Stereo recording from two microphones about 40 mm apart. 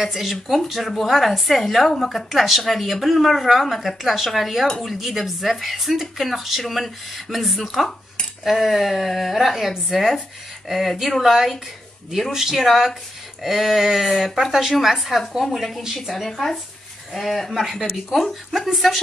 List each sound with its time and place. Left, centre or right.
0.0 s a woman's voice: centre